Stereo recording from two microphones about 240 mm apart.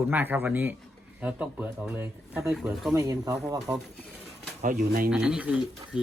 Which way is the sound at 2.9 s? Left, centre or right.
Centre.